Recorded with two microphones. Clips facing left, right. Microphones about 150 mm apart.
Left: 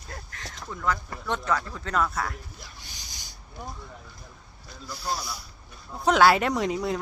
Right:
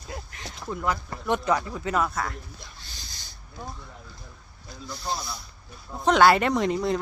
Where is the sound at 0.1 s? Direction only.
15° right (ahead or behind).